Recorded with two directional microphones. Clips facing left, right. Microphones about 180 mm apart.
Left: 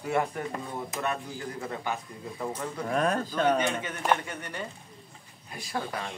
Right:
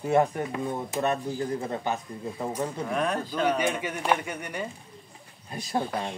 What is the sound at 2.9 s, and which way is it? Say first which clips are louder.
Speech: left 3 dB; 40° left (ahead or behind).